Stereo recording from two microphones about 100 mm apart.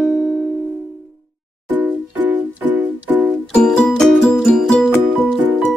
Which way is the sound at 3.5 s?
10° left (ahead or behind).